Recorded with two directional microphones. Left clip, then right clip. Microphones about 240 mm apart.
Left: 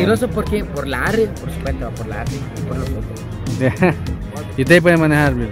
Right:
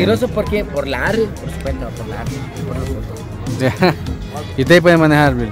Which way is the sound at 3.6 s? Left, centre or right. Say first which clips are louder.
Right 2 dB; centre.